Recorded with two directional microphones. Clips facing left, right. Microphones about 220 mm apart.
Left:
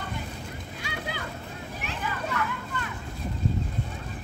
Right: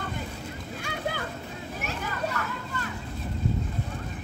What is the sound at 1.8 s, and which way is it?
Children playing, 45° right (ahead or behind).